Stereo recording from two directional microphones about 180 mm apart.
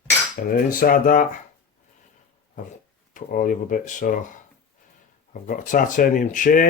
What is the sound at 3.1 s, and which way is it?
Speech, 50° left (ahead or behind).